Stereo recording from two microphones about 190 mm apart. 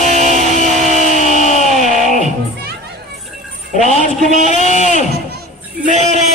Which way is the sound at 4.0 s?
40° right (ahead or behind).